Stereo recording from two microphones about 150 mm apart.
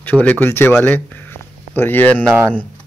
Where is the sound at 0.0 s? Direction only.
10° left (ahead or behind).